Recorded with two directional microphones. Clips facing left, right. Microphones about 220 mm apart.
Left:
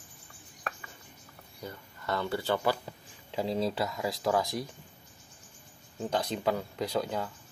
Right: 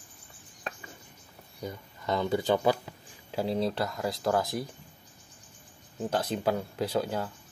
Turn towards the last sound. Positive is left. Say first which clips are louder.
# right 2 dB
turn(degrees=-5)  # may be behind; listen again after turning